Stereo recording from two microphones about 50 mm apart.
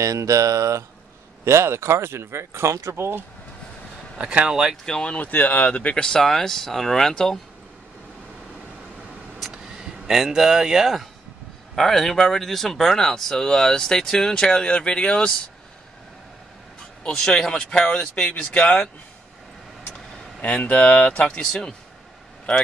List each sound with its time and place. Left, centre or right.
0.1 s speech: right
1.4 s speech: right
4.2 s speech: right
4.5 s speech: centre
4.8 s speech: centre
5.1 s speech: left
6.0 s speech: centre
9.5 s a sound: centre
11.7 s speech: centre
17.0 s speech: centre
18.3 s speech: left
19.9 s speech: left